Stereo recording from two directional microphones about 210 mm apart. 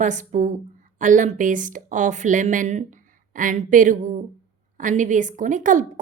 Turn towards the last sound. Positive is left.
turn(degrees=-35)  # may be behind; listen again after turning